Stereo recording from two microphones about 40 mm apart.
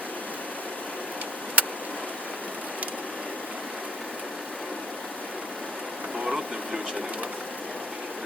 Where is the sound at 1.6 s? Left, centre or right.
Right.